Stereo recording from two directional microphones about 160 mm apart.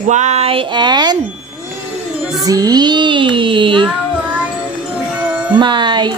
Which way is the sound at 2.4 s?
25° right (ahead or behind).